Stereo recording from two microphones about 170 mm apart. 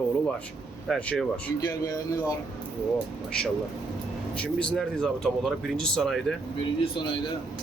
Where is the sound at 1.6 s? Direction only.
20° left (ahead or behind).